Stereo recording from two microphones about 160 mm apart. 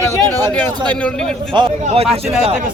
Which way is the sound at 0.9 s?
10° left (ahead or behind).